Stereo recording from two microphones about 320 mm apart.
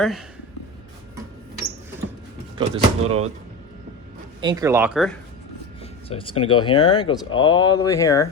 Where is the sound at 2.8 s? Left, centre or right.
Centre.